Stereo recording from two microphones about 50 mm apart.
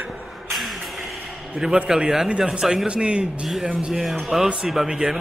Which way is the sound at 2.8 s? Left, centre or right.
Right.